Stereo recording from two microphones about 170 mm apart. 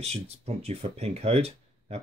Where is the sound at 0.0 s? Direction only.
35° right (ahead or behind).